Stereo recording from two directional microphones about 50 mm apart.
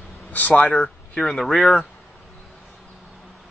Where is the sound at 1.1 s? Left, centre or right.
Centre.